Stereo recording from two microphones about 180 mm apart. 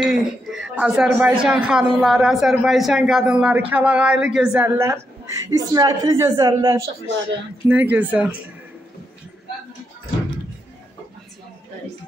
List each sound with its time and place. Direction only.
0.0 s speech: 5° right (ahead or behind); by 6.8 s 20° right (ahead or behind)
7.6 s speech: 10° right (ahead or behind)